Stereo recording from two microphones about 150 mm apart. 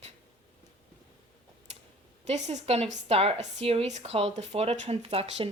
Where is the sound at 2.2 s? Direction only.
50° right (ahead or behind).